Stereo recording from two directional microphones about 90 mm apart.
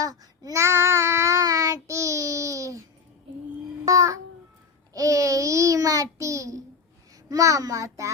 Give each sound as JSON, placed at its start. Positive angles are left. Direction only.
{"t": 0.0, "sound": "child singing", "side_deg": -40}
{"t": 3.8, "sound": "babbling", "side_deg": -35}
{"t": 4.9, "sound": "child singing", "side_deg": -40}
{"t": 7.3, "sound": "a child's voice", "side_deg": -40}